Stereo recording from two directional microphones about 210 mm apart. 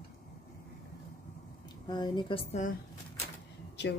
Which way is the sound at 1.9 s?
20° left (ahead or behind).